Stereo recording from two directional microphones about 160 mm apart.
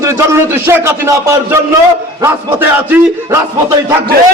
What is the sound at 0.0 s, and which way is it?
Speech, 15° right (ahead or behind).